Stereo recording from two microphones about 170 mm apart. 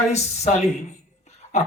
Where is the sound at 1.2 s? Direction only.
40° left (ahead or behind).